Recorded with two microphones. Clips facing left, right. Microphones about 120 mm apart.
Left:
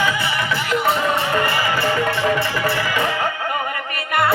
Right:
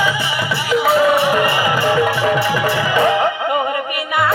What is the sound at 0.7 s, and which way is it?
Music, 5° right (ahead or behind).